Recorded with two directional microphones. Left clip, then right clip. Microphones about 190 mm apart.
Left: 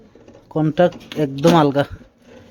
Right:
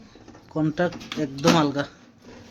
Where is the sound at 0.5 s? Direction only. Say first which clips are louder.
Left 8 dB; 55° left (ahead or behind).